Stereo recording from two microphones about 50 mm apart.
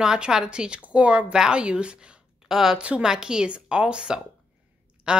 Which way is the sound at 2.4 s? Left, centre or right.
Centre.